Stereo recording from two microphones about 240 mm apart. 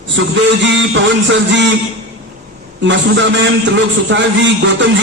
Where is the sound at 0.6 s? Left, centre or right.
Right.